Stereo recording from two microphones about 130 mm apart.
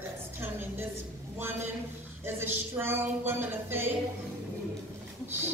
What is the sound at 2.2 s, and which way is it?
Speech, 15° right (ahead or behind).